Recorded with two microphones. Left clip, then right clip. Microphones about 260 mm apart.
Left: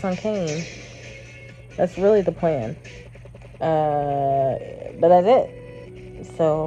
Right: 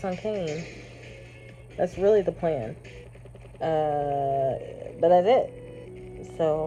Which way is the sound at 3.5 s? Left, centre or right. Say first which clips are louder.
Left 5 dB; centre.